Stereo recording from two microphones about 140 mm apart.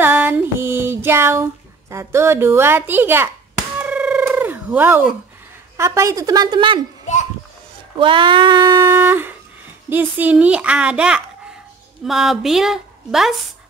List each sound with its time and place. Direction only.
0.0 s female singing: 15° right (ahead or behind)
3.7 s a sound: 10° right (ahead or behind)
4.2 s fowl: 15° right (ahead or behind)
5.8 s a woman's voice: 20° right (ahead or behind)
8.0 s a sound: 35° right (ahead or behind)
8.9 s a child's voice: 15° right (ahead or behind)